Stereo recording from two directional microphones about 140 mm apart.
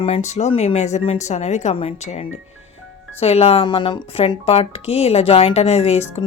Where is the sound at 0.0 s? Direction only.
50° left (ahead or behind).